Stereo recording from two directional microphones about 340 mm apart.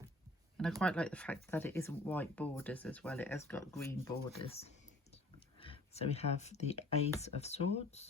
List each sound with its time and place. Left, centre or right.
0.8 s speech: centre